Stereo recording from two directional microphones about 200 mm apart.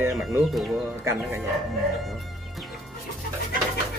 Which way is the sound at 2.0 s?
Centre (ahead or behind).